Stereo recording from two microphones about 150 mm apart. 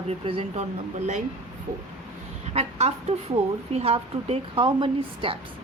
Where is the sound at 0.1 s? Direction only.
40° right (ahead or behind).